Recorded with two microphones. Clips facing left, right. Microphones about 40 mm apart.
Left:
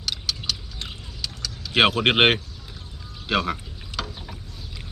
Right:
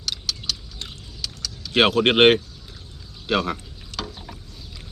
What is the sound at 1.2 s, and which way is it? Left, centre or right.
Keys jangling, centre.